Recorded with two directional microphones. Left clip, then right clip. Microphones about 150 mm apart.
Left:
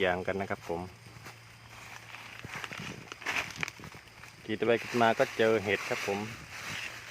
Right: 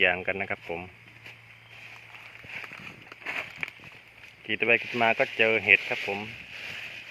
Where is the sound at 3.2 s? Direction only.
60° right (ahead or behind).